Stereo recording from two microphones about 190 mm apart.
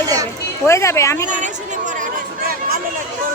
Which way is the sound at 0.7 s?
15° left (ahead or behind).